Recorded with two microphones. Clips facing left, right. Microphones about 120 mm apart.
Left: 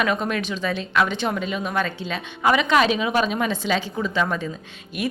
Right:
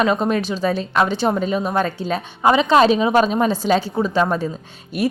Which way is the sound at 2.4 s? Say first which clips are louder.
Right 5 dB; 30° right (ahead or behind).